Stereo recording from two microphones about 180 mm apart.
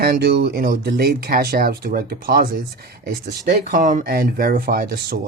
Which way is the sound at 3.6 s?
45° right (ahead or behind).